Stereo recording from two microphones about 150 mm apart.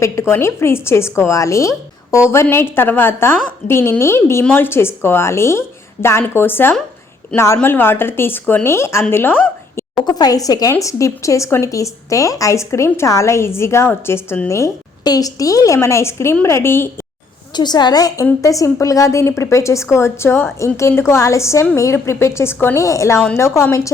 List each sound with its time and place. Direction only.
0.0 s a woman's voice: 15° left (ahead or behind)
10.1 s a woman's voice: 25° left (ahead or behind)
17.5 s a woman's voice: 30° left (ahead or behind)